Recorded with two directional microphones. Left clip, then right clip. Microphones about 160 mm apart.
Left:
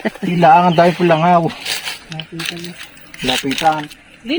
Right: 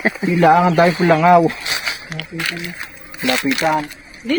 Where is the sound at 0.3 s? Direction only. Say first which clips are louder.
Left 3 dB; 75° left (ahead or behind); by 1.2 s 90° left.